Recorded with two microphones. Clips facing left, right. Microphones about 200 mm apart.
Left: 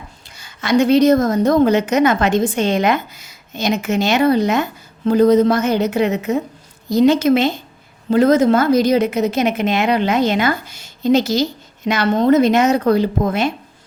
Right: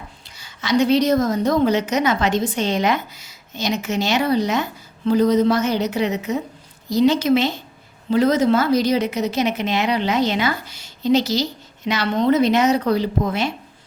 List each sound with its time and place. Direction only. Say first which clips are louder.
0.3 s a woman's voice: left 3 dB; 50° left (ahead or behind)